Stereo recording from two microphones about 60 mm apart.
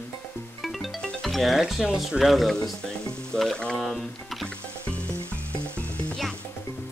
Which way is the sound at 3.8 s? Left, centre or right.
Centre.